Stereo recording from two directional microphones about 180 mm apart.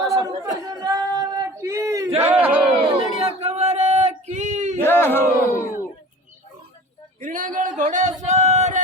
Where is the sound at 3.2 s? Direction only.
35° right (ahead or behind).